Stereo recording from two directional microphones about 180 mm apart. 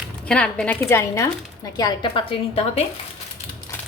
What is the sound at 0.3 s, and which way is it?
Speech, 5° left (ahead or behind).